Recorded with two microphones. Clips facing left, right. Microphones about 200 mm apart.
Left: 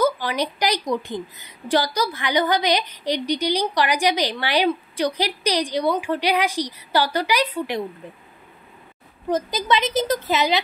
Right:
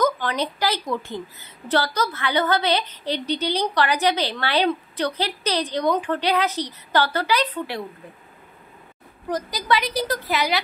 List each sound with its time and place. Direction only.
0.0 s a woman's voice: 10° left (ahead or behind)
9.3 s a woman's voice: 20° left (ahead or behind)